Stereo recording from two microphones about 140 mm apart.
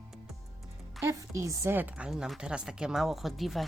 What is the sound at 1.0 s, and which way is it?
Speech, 20° right (ahead or behind).